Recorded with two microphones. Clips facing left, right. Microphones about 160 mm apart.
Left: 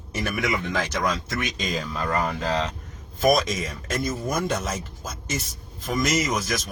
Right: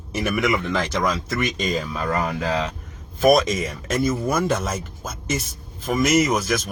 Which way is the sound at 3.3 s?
70° right (ahead or behind).